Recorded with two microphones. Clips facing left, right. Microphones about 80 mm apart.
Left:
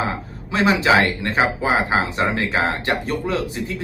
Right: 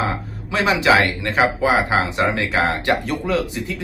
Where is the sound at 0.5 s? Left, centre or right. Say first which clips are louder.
Even; left.